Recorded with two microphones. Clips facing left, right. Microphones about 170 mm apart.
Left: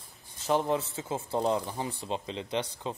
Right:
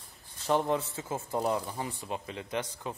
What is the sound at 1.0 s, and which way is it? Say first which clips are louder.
Speech: left 2 dB; 25° left (ahead or behind).